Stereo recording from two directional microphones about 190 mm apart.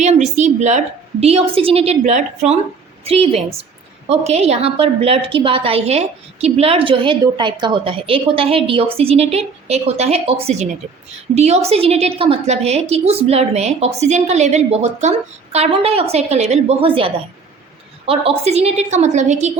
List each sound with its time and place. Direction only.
0.0 s a woman's voice: 35° right (ahead or behind)